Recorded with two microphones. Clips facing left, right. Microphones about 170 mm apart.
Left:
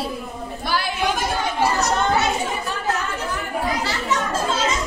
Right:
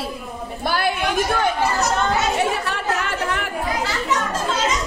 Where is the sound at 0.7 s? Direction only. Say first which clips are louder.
Right 4 dB; 55° right (ahead or behind).